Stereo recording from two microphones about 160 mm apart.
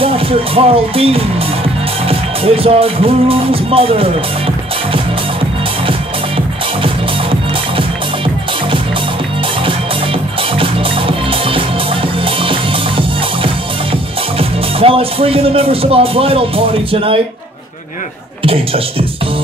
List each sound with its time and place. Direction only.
0.0 s speech: 35° right (ahead or behind)
5.9 s music: 35° right (ahead or behind)
10.6 s music: 35° right (ahead or behind)
14.4 s speech: 35° right (ahead or behind)
18.4 s speech: 35° right (ahead or behind)